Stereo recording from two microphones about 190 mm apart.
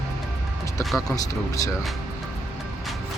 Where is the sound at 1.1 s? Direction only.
15° left (ahead or behind).